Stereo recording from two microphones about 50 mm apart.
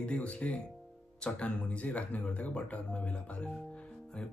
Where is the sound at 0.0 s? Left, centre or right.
Left.